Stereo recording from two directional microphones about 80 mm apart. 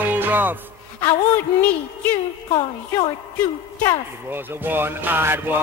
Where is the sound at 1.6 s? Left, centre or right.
Centre.